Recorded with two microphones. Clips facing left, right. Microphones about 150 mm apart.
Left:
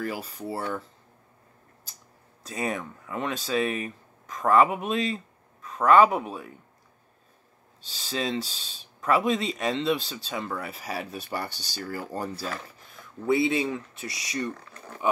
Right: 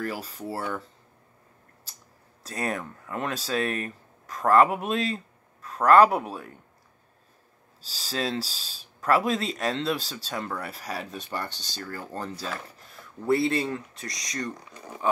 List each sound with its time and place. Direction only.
0.0 s speech: centre (ahead or behind)
2.4 s speech: centre (ahead or behind)
7.8 s speech: centre (ahead or behind)
12.4 s speech: centre (ahead or behind)
14.5 s speech: 15° right (ahead or behind)